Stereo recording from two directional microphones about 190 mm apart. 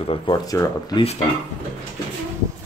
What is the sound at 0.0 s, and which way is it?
Speech, 30° left (ahead or behind).